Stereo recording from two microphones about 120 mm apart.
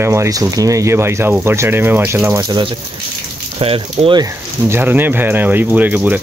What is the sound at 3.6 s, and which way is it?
Speech, 50° right (ahead or behind).